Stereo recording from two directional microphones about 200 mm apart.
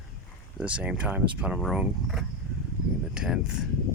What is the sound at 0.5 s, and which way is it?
Speech, 5° right (ahead or behind).